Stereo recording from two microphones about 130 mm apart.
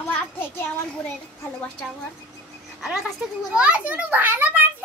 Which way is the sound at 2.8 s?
Centre (ahead or behind).